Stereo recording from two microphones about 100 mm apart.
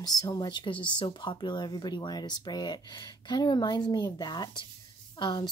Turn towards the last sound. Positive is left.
turn(degrees=45)  # may be behind; listen again after turning